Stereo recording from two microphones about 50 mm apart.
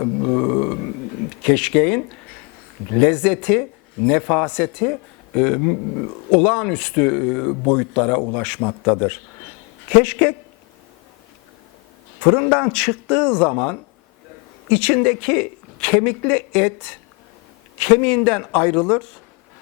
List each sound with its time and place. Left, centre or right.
0.0 s a sound: centre
1.4 s speech: centre
8.2 s speech: left
9.9 s speech: left
12.5 s speech: left
13.5 s speech: centre